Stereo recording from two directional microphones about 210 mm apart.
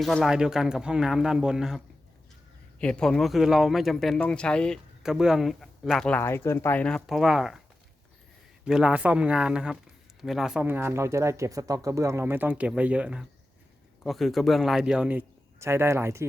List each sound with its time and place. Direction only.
0.0 s speech: centre (ahead or behind)
8.6 s speech: 5° right (ahead or behind)